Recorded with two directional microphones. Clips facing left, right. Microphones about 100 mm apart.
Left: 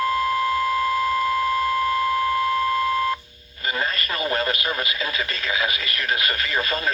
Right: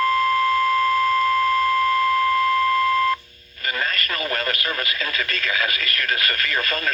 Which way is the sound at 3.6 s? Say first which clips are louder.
Even; 20° left (ahead or behind).